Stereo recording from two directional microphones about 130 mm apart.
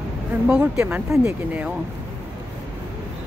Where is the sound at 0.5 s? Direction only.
10° right (ahead or behind).